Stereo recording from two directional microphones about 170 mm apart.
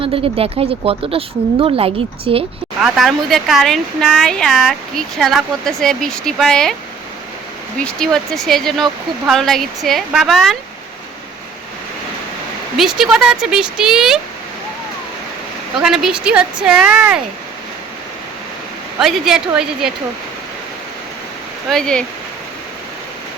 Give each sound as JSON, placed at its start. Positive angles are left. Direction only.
{"t": 0.0, "sound": "speech", "side_deg": -35}
{"t": 2.8, "sound": "speech", "side_deg": 0}
{"t": 7.9, "sound": "speech", "side_deg": 5}
{"t": 12.7, "sound": "speech", "side_deg": 0}
{"t": 15.8, "sound": "speech", "side_deg": 0}
{"t": 18.9, "sound": "speech", "side_deg": 0}
{"t": 21.7, "sound": "speech", "side_deg": 5}